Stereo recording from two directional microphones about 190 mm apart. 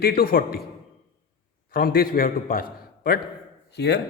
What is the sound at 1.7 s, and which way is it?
Speech, 50° left (ahead or behind).